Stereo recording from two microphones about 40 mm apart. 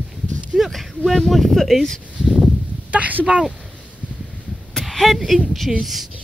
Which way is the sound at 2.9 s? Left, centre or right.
Right.